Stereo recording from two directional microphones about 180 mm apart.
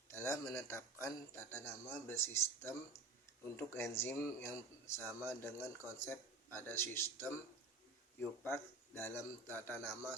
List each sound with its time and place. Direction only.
0.1 s a sound: 15° left (ahead or behind)
1.0 s speech: 15° left (ahead or behind)
8.4 s speech: 15° left (ahead or behind)